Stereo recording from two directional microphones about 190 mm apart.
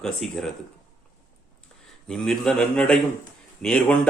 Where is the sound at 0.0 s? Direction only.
Centre (ahead or behind).